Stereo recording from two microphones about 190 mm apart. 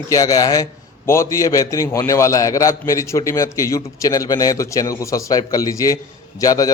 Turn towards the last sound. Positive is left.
turn(degrees=20)  # may be behind; listen again after turning